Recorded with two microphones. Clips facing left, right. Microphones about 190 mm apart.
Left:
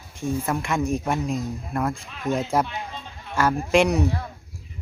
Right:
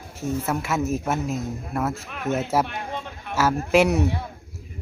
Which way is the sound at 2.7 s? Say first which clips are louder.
Right 3 dB; 55° right (ahead or behind).